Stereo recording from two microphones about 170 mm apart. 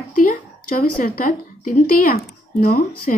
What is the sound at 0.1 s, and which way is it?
A woman's voice, 50° left (ahead or behind).